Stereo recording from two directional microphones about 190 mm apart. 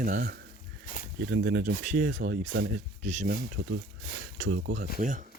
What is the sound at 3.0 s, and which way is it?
Speech, 40° right (ahead or behind).